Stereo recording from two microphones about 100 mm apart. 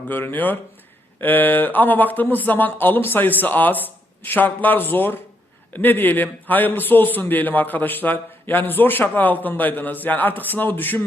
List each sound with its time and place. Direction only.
0.1 s a man's voice: 20° left (ahead or behind)